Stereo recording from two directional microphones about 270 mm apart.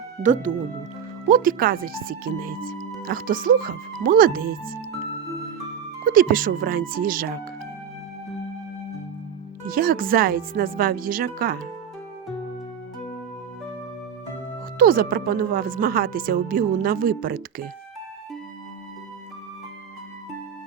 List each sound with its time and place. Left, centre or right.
0.2 s speech: right
6.1 s speech: right
9.6 s speech: right
14.8 s speech: right